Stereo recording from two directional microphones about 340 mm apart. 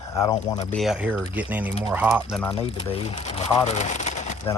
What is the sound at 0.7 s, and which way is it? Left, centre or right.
Speech, centre.